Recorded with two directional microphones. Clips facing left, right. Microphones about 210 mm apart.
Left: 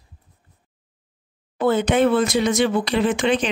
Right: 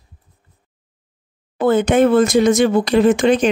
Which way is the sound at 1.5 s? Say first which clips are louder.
Right 4 dB; 50° right (ahead or behind).